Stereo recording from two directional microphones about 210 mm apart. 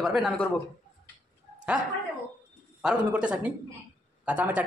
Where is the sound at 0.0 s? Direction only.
Centre (ahead or behind).